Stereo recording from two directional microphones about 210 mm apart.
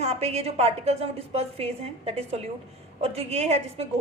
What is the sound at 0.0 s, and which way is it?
A woman's voice, 30° right (ahead or behind).